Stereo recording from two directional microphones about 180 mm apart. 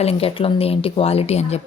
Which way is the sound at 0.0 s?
35° left (ahead or behind).